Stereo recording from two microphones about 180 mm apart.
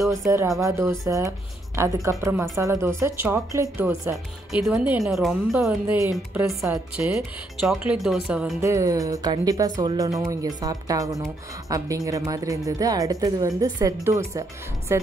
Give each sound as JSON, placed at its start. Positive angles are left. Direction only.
{"t": 0.1, "sound": "a woman's voice", "side_deg": -15}
{"t": 4.5, "sound": "speech", "side_deg": -5}
{"t": 8.6, "sound": "a woman's voice", "side_deg": -15}